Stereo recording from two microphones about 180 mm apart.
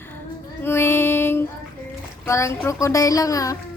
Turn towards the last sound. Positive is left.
turn(degrees=20)  # may be behind; listen again after turning